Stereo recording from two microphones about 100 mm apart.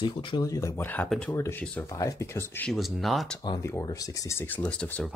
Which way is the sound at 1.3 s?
25° left (ahead or behind).